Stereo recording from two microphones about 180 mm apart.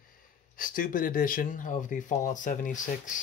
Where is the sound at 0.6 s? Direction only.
50° left (ahead or behind).